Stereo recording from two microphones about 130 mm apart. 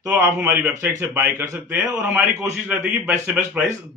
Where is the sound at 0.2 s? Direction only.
15° right (ahead or behind).